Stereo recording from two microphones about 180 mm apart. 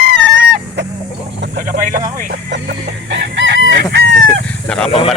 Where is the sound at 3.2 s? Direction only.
75° right (ahead or behind).